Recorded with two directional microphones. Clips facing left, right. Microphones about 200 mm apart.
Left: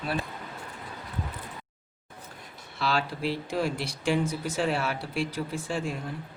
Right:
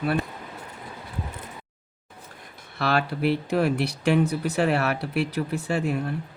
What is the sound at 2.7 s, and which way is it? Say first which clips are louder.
Speech: right 4 dB; 60° right (ahead or behind).